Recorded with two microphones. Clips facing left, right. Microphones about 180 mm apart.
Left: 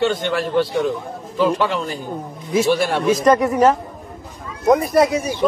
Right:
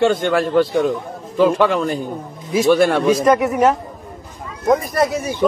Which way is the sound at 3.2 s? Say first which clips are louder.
Left 4 dB; 5° right (ahead or behind).